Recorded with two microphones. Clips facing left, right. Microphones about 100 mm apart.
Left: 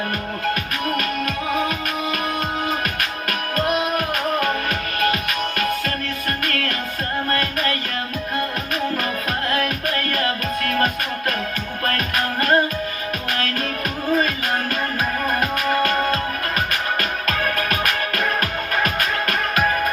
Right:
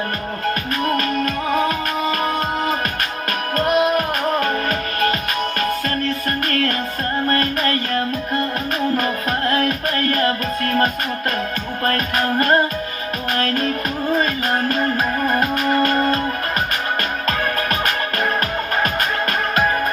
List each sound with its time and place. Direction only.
0.9 s music: 35° right (ahead or behind)
6.5 s music: 35° right (ahead or behind)
9.5 s music: 35° right (ahead or behind)
11.9 s music: 30° right (ahead or behind)